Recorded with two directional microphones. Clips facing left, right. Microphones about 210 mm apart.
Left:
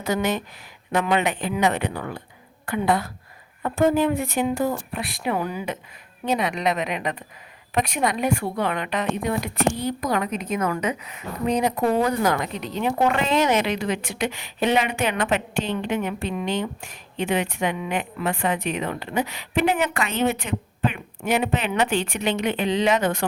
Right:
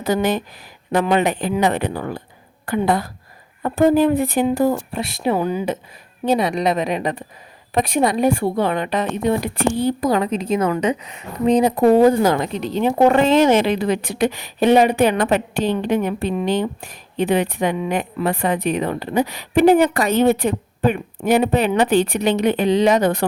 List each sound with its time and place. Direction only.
0.0 s a woman's voice: 35° right (ahead or behind)